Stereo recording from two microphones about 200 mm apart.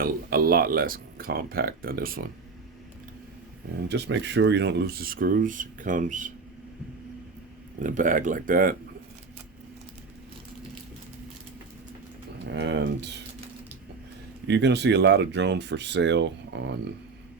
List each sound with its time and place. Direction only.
0.0 s speech: 45° right (ahead or behind)
3.8 s speech: 60° right (ahead or behind); by 6.3 s 40° right (ahead or behind)
7.8 s speech: 40° right (ahead or behind)
12.5 s a sound: 60° right (ahead or behind)
14.4 s speech: 60° right (ahead or behind)